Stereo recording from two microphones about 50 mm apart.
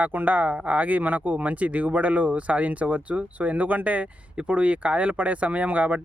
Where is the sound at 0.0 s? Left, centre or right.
Right.